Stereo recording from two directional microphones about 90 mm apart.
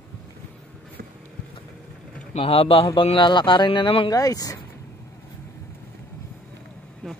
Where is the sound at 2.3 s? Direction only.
90° left; by 4.1 s 70° left (ahead or behind).